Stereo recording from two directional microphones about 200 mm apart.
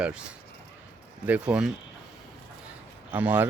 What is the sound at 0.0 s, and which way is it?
Speech, 5° right (ahead or behind).